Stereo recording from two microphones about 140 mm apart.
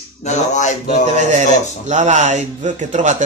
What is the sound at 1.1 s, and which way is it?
Speech, 55° right (ahead or behind).